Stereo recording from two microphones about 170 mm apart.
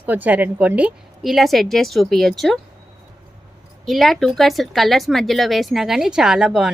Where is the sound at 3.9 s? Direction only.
Centre (ahead or behind).